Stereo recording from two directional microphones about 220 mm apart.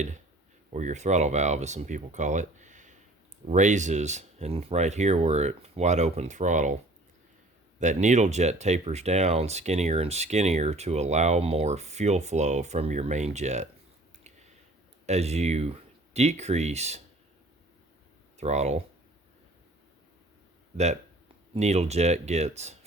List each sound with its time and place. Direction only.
0.7 s speech: 35° right (ahead or behind)
7.8 s speech: 35° right (ahead or behind)
15.0 s speech: 30° right (ahead or behind)
18.3 s speech: 30° right (ahead or behind)
21.5 s speech: 30° right (ahead or behind)